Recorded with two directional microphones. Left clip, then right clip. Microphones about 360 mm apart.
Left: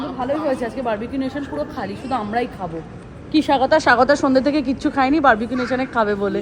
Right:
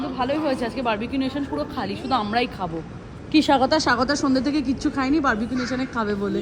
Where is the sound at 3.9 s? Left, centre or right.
Centre.